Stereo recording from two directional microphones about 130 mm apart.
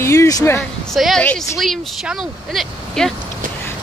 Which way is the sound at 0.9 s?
Centre (ahead or behind).